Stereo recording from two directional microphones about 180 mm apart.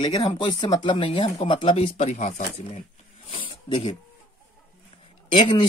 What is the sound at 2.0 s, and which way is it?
Speech, 45° left (ahead or behind).